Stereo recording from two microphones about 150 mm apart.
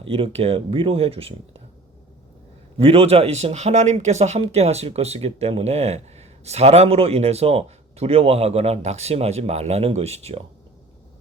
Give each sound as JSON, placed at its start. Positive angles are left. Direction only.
{"t": 0.0, "sound": "speech", "side_deg": -40}
{"t": 2.7, "sound": "speech", "side_deg": -40}